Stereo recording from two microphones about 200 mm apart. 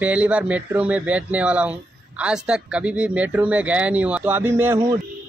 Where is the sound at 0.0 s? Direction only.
5° right (ahead or behind).